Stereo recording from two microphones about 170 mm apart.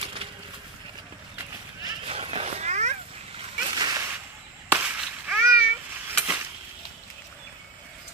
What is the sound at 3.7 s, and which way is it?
Whip, 25° right (ahead or behind).